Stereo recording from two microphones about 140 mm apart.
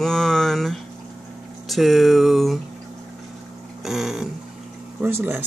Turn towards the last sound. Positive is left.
turn(degrees=-15)  # may be behind; listen again after turning